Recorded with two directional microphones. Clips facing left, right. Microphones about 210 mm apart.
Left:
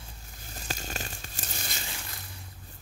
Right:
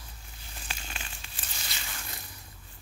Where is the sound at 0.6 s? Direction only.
40° left (ahead or behind).